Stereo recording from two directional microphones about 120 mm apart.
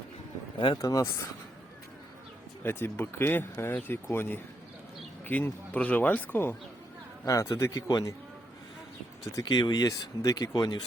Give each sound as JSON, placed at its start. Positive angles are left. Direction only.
{"t": 0.8, "sound": "speech", "side_deg": 30}
{"t": 2.6, "sound": "speech", "side_deg": 20}
{"t": 9.2, "sound": "speech", "side_deg": 30}